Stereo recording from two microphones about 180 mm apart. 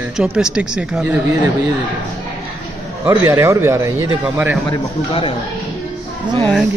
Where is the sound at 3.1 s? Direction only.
15° right (ahead or behind).